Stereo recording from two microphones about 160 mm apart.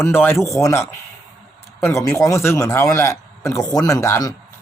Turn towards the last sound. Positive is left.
turn(degrees=20)  # may be behind; listen again after turning